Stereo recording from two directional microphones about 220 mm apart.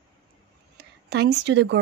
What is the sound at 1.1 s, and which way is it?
Speech, 50° right (ahead or behind).